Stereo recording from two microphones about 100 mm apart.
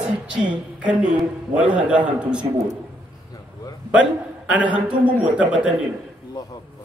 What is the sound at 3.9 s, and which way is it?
A man's voice, 10° right (ahead or behind).